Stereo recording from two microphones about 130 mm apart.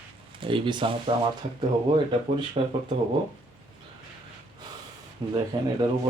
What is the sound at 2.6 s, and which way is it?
Speech, 50° right (ahead or behind).